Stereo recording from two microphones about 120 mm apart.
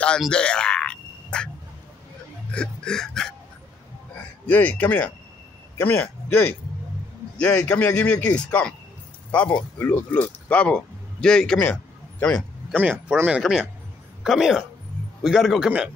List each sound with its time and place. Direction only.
0.2 s frog: 10° left (ahead or behind)
2.5 s hiccup: 10° left (ahead or behind)
4.5 s a man's voice: 15° left (ahead or behind)
12.7 s speech: 15° right (ahead or behind)
13.4 s a man's voice: 5° right (ahead or behind)